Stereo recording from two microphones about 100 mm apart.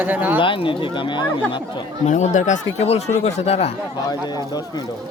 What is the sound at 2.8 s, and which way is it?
Speech, 90° left.